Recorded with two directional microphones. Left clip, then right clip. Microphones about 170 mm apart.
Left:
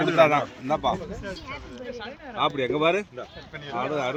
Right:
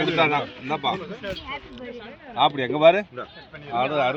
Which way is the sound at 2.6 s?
65° right (ahead or behind).